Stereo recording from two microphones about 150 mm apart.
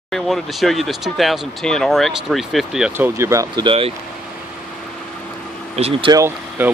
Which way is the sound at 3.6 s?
40° right (ahead or behind).